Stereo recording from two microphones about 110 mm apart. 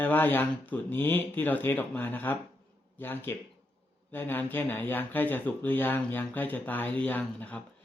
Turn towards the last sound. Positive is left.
turn(degrees=15)  # may be behind; listen again after turning